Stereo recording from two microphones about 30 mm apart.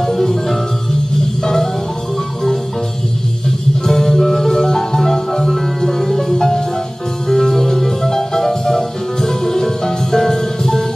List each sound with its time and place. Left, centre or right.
0.0 s music: centre
3.8 s music: centre